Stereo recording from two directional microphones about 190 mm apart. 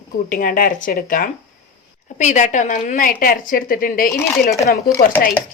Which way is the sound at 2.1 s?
40° left (ahead or behind).